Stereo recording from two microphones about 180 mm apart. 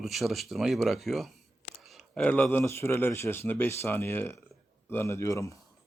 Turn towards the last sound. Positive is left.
turn(degrees=15)  # may be behind; listen again after turning